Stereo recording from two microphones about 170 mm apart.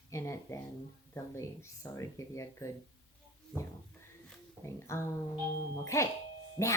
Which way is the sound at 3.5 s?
5° left (ahead or behind).